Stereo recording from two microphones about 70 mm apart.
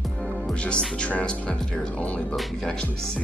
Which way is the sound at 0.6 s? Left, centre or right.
Centre.